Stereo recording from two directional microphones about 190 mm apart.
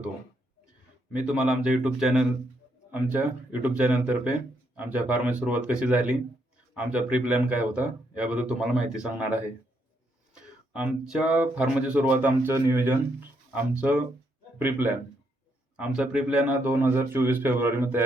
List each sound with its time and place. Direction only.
1.1 s a man's voice: 5° right (ahead or behind)
15.8 s speech: 5° right (ahead or behind)